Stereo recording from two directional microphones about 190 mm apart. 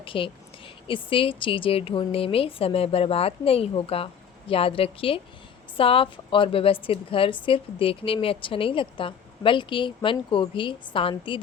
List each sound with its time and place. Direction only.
0.0 s a woman's voice: 30° left (ahead or behind)